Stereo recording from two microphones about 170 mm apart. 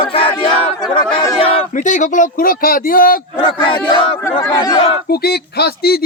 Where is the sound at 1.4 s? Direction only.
35° left (ahead or behind).